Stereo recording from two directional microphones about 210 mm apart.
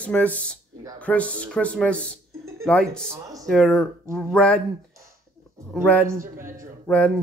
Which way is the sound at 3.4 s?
Centre (ahead or behind).